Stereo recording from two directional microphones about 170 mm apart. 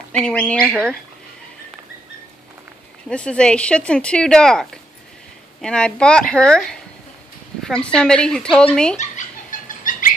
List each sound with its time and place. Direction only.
0.1 s speech: 5° left (ahead or behind)
3.1 s speech: 5° left (ahead or behind)
8.9 s a sound: 50° left (ahead or behind)